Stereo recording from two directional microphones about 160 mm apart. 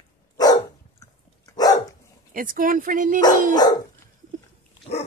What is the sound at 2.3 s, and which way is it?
Speech, 60° right (ahead or behind).